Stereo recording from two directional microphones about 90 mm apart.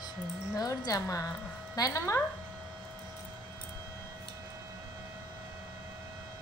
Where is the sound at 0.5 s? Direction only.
45° left (ahead or behind).